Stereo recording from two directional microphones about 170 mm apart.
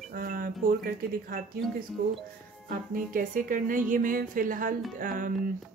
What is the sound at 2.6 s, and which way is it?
Speech, 55° right (ahead or behind).